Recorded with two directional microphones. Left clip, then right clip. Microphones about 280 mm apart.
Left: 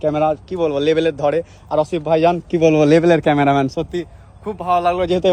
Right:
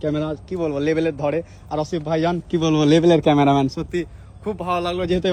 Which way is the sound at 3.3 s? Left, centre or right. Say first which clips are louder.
Left 2 dB; left.